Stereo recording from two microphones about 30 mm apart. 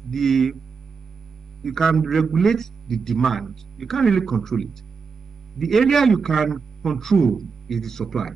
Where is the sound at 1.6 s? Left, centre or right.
Centre.